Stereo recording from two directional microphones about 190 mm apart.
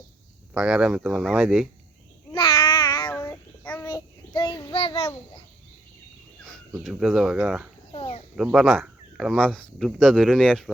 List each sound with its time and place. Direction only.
0.5 s speech: 5° right (ahead or behind)
2.3 s babbling: 25° left (ahead or behind)
3.1 s child singing: 10° left (ahead or behind)
4.4 s child singing: 25° left (ahead or behind)
6.4 s speech: centre (ahead or behind)
7.9 s a sound: 30° left (ahead or behind)
8.4 s speech: 5° right (ahead or behind)